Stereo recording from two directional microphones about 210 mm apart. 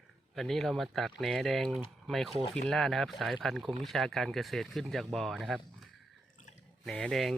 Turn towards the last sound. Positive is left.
turn(degrees=0)  # may be behind; listen again after turning